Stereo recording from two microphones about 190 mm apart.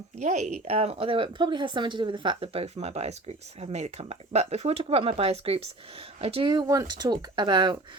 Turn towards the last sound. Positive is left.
turn(degrees=-25)  # may be behind; listen again after turning